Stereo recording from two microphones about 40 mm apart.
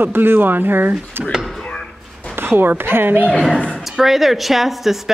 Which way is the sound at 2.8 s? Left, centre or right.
Right.